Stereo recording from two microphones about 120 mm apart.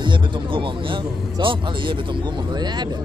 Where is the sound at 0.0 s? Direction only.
45° right (ahead or behind).